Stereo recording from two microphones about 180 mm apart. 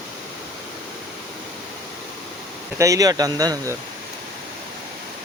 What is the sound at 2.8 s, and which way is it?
Speech, 20° right (ahead or behind).